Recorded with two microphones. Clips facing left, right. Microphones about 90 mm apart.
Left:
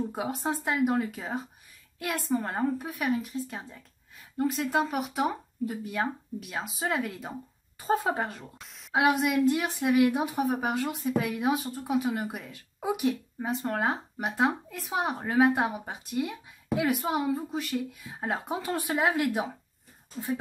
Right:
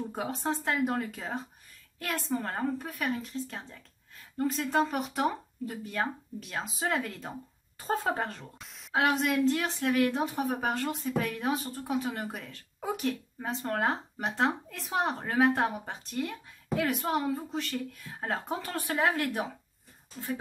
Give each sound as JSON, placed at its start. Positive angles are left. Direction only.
{"t": 0.1, "sound": "a woman's voice", "side_deg": 5}